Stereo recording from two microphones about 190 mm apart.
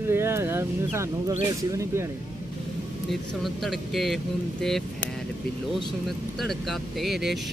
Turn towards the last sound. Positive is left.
turn(degrees=0)  # may be behind; listen again after turning